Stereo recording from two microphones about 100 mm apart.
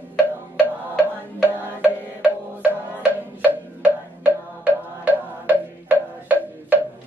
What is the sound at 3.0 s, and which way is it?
Music, 15° right (ahead or behind).